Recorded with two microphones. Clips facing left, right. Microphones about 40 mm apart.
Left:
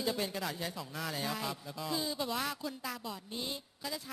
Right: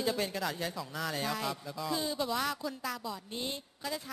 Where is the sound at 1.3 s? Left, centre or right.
Centre.